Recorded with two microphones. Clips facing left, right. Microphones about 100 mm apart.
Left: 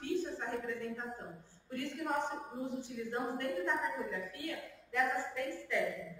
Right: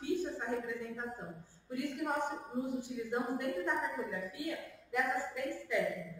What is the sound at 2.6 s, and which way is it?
A woman's voice, 5° right (ahead or behind).